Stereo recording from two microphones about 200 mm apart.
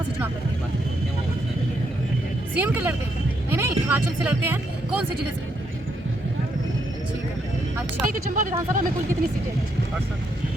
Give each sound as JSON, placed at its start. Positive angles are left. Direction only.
{"t": 2.6, "sound": "speech", "side_deg": -10}
{"t": 8.1, "sound": "speech", "side_deg": -40}